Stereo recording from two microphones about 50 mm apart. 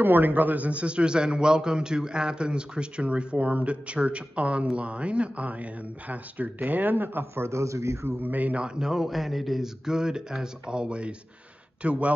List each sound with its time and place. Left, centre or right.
0.0 s a man's voice: right
7.4 s a man's voice: right
8.2 s a man's voice: right